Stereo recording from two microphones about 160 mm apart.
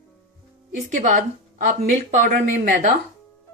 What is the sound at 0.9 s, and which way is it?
Speech, 50° right (ahead or behind).